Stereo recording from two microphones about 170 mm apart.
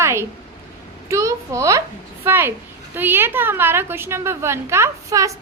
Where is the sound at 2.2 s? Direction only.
10° right (ahead or behind).